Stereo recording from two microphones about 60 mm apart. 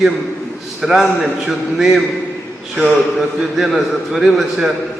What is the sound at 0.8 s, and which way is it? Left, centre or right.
A man's voice, centre.